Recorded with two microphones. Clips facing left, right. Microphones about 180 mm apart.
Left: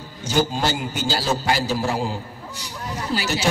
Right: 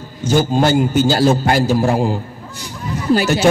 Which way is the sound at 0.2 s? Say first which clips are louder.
Right 7 dB; 50° right (ahead or behind).